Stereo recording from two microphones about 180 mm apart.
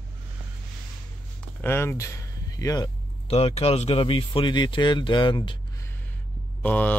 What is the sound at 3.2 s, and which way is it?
Speech, 35° left (ahead or behind).